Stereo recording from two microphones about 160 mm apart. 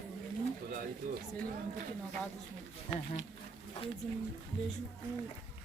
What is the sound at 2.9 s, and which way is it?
Speech, 15° left (ahead or behind).